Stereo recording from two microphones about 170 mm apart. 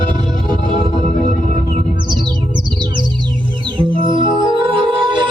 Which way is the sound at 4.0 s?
30° right (ahead or behind).